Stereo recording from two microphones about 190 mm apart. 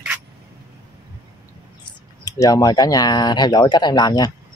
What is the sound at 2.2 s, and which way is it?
Speech, 15° left (ahead or behind).